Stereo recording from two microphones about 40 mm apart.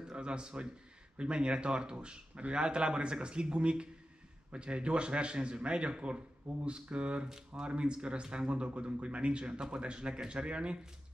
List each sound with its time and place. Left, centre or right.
0.1 s a man's voice: right